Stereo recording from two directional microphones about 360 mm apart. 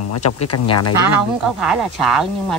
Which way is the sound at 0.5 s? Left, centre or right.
Left.